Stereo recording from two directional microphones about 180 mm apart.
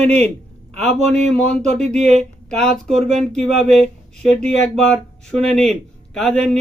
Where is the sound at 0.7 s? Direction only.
40° right (ahead or behind).